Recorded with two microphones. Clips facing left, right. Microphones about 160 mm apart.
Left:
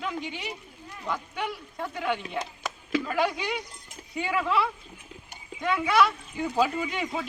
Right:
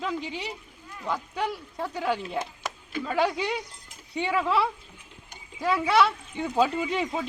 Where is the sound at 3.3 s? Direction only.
30° right (ahead or behind).